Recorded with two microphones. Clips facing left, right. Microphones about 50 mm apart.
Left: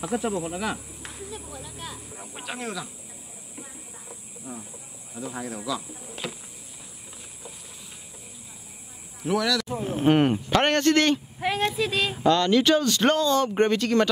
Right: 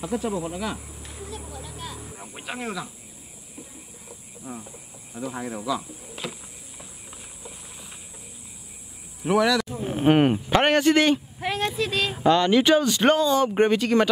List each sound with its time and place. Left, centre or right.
0.4 s speech: centre
4.5 s speech: centre
9.2 s speech: right
11.3 s speech: centre
12.2 s speech: centre